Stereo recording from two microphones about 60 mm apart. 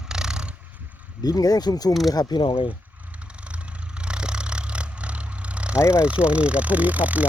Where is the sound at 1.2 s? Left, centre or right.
Left.